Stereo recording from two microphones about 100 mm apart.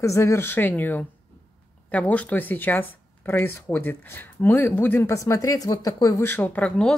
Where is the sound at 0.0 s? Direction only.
30° left (ahead or behind).